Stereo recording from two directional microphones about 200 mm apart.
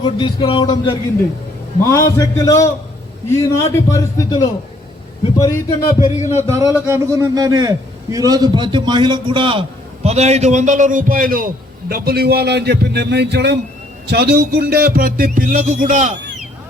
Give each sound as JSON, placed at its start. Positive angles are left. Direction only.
{"t": 0.0, "sound": "speech", "side_deg": 25}
{"t": 5.4, "sound": "speech", "side_deg": 15}
{"t": 6.3, "sound": "a man's voice", "side_deg": -15}
{"t": 14.1, "sound": "music", "side_deg": -55}